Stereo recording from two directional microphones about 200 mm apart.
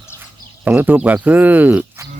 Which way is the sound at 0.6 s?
5° right (ahead or behind).